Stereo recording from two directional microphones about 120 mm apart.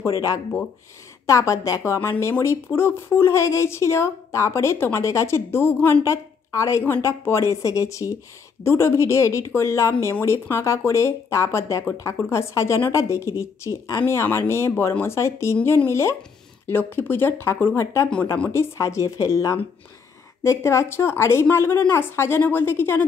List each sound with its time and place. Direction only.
0.0 s a woman's voice: 30° left (ahead or behind)